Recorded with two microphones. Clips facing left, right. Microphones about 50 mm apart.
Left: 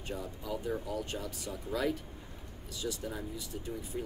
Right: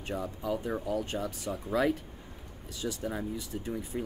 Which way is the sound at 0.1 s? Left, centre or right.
Right.